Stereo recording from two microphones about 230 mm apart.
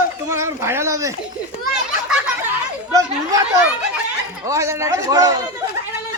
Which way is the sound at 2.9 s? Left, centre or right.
Centre.